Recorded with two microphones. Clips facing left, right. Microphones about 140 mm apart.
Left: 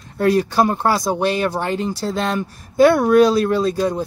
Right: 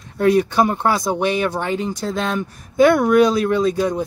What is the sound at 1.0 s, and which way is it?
Speech, 15° left (ahead or behind).